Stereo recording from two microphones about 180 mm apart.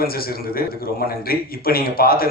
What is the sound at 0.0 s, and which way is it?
A man's voice, 55° left (ahead or behind).